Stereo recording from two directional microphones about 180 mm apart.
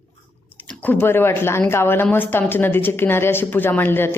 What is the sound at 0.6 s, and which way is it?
Speech, 10° left (ahead or behind).